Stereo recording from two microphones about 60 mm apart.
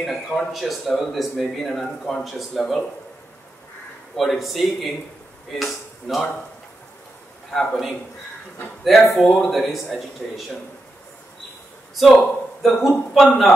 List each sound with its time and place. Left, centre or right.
0.0 s speech: centre
4.2 s speech: centre
7.5 s speech: centre
11.9 s speech: centre